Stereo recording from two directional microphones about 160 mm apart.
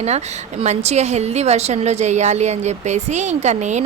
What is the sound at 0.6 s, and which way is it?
Speech, 45° right (ahead or behind).